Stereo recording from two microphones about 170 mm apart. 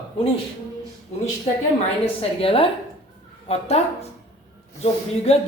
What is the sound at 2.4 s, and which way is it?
A woman's voice, 35° left (ahead or behind).